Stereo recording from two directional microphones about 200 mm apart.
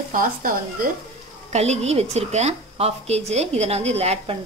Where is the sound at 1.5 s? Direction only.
35° right (ahead or behind).